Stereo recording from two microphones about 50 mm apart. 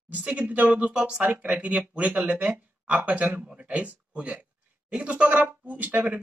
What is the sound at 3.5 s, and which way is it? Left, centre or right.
Speech, right.